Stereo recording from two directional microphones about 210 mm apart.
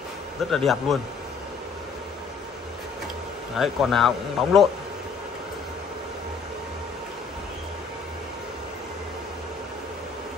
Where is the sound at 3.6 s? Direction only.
Centre (ahead or behind).